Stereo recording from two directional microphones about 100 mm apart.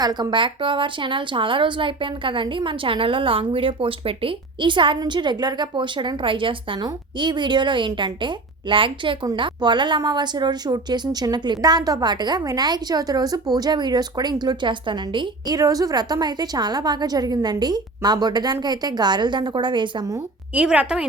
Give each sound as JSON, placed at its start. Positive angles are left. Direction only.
{"t": 0.0, "sound": "a woman's voice", "side_deg": -45}
{"t": 15.5, "sound": "a woman's voice", "side_deg": -35}
{"t": 20.5, "sound": "a woman's voice", "side_deg": -15}